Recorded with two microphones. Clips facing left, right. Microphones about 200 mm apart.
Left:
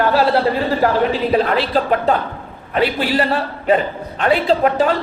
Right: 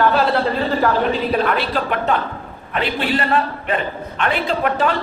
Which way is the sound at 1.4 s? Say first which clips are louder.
Left 2 dB; 30° left (ahead or behind).